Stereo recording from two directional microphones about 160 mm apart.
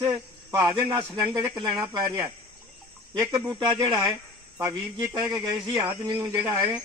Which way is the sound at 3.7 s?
25° right (ahead or behind).